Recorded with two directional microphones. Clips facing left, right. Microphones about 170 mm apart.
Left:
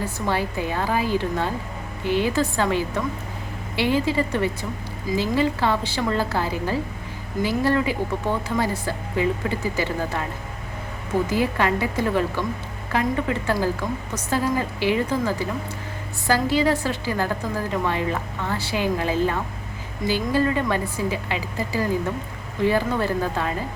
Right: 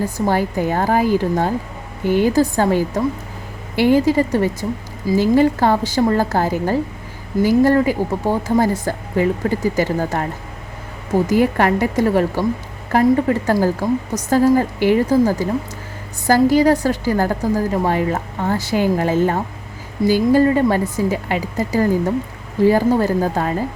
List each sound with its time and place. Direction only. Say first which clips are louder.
0.3 s a woman's voice: right 6 dB; 45° right (ahead or behind)
11.3 s a woman's voice: right 8 dB; 50° right (ahead or behind)